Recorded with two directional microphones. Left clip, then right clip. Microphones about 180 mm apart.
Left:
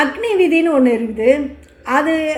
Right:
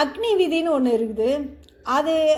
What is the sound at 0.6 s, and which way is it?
A woman's voice, 25° right (ahead or behind).